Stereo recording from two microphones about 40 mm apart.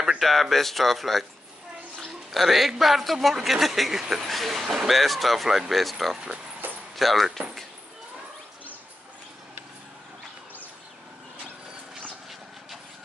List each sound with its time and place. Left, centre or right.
0.2 s speech: centre
2.3 s speech: centre
6.6 s a sound: right
7.0 s speech: centre